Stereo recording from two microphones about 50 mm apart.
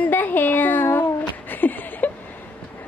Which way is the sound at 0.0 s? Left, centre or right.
Left.